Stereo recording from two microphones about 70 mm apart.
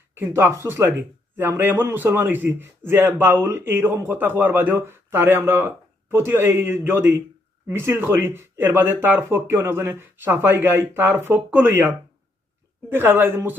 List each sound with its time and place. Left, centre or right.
0.1 s speech: right